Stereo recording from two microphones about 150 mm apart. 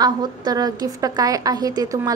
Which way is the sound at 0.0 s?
30° right (ahead or behind).